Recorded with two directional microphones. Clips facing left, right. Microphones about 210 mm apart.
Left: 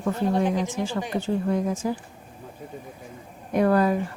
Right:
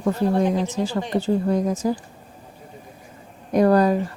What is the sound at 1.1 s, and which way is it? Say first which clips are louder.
Speech: right 5 dB; 35° right (ahead or behind).